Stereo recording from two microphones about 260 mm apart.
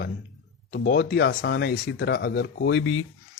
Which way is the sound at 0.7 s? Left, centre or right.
Left.